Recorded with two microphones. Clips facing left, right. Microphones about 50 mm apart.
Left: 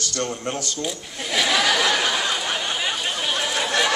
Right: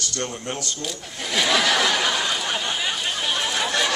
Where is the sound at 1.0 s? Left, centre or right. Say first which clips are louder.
Right 1 dB; centre.